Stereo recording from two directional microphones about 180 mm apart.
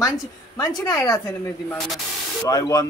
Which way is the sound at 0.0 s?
20° left (ahead or behind).